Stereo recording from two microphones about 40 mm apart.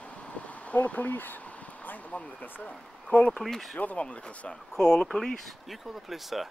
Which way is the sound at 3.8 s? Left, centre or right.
Left.